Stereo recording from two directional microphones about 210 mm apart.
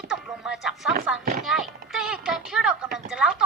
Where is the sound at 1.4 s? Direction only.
Centre (ahead or behind).